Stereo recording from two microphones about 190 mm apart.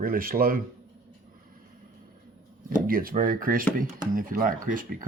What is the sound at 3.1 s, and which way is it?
Speech, 50° right (ahead or behind).